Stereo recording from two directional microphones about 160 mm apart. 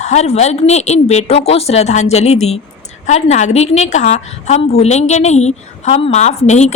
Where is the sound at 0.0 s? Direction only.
45° left (ahead or behind).